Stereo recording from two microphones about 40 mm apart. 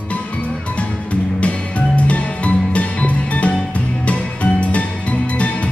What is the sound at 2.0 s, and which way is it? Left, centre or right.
Music, left.